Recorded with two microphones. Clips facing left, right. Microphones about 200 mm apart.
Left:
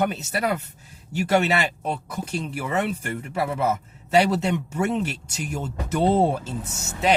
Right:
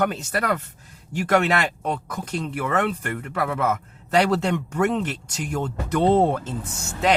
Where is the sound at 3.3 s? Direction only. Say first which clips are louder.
Even; 30° left (ahead or behind).